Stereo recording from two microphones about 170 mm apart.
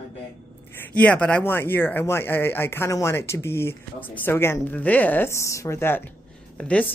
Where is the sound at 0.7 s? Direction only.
10° left (ahead or behind).